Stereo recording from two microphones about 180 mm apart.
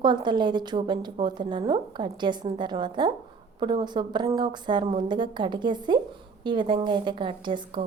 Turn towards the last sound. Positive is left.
turn(degrees=-25)  # may be behind; listen again after turning